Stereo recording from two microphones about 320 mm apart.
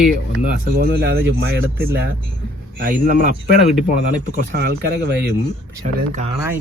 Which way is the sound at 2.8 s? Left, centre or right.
Right.